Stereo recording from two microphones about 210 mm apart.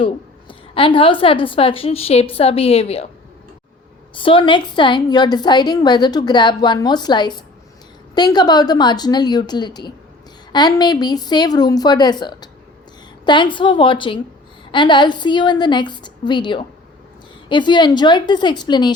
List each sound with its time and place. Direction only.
0.0 s a woman's voice: 25° left (ahead or behind)
4.1 s a woman's voice: 25° left (ahead or behind)